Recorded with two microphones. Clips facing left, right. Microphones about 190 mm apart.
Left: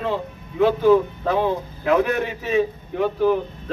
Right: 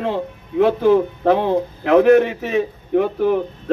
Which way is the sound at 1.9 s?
55° right (ahead or behind).